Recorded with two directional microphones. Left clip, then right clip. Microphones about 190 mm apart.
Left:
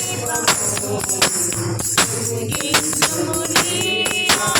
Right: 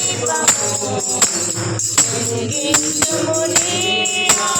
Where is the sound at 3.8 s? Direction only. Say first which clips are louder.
Right 2 dB; 35° left (ahead or behind).